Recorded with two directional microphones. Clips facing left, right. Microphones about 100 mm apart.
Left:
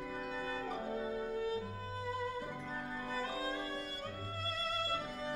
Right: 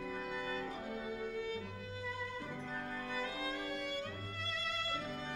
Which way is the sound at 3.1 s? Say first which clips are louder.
Left 3 dB; 35° left (ahead or behind).